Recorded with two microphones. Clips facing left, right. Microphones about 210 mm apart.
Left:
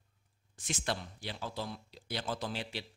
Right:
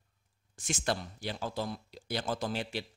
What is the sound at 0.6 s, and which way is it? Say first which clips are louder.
A man's voice: right 3 dB; 45° right (ahead or behind).